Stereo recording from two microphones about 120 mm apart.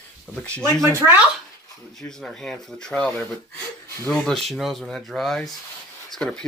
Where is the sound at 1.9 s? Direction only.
5° left (ahead or behind).